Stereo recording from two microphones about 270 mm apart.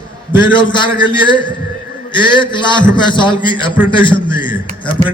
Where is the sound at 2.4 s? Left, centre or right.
Centre.